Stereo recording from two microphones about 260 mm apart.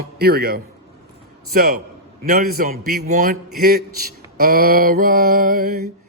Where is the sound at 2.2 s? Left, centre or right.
Right.